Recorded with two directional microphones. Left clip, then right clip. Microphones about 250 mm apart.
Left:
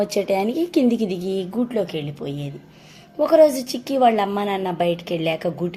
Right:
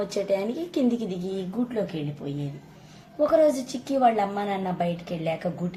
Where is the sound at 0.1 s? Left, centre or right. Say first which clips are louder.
Left 5 dB; left.